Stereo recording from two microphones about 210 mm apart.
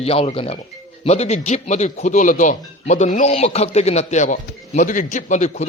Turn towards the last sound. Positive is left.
turn(degrees=35)  # may be behind; listen again after turning